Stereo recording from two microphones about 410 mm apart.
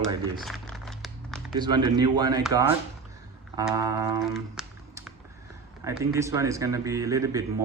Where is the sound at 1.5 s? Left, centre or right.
Centre.